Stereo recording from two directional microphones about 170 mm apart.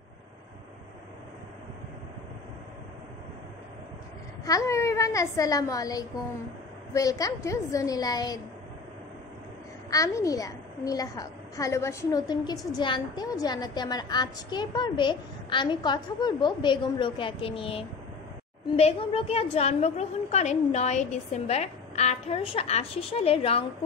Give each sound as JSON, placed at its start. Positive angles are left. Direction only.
{"t": 4.5, "sound": "a child's voice", "side_deg": 20}
{"t": 9.8, "sound": "a child's voice", "side_deg": 20}